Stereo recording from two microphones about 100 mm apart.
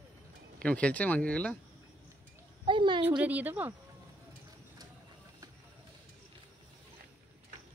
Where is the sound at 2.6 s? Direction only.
55° right (ahead or behind).